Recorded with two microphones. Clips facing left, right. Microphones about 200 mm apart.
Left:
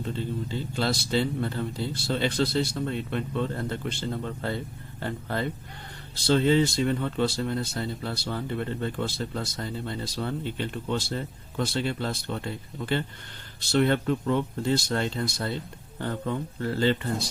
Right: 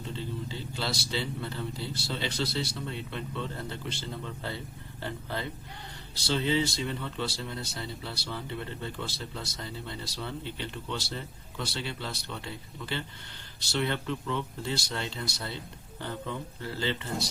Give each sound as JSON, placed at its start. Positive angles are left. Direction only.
{"t": 0.0, "sound": "speech", "side_deg": 50}